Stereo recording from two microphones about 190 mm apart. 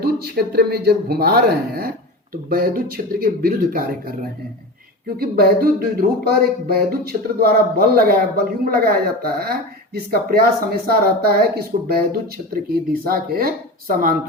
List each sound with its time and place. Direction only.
0.0 s speech: 55° right (ahead or behind)
5.0 s speech: 50° right (ahead or behind)